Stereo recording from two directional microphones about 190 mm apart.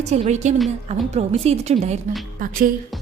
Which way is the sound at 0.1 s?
35° right (ahead or behind).